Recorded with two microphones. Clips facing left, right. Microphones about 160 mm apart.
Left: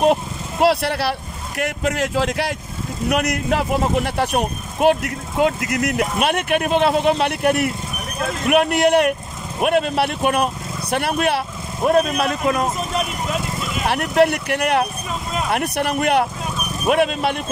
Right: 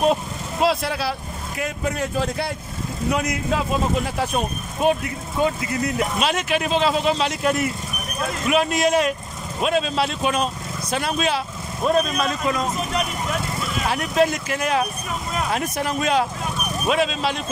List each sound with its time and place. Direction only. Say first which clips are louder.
0.0 s speech: left 3 dB; 70° left (ahead or behind); by 2.5 s 90° left
3.1 s speech: left 3 dB; 75° left (ahead or behind)
13.8 s speech: left 4 dB; 60° left (ahead or behind)